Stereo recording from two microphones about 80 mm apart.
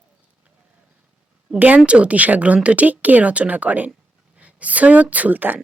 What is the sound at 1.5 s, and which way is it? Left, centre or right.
A woman's voice, centre.